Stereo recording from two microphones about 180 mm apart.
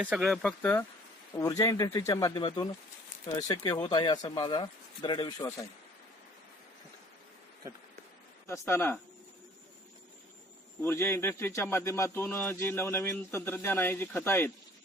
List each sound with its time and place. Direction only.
0.0 s speech: 5° right (ahead or behind); by 5.6 s 20° left (ahead or behind)
8.4 s speech: 15° left (ahead or behind)
10.8 s speech: 15° left (ahead or behind)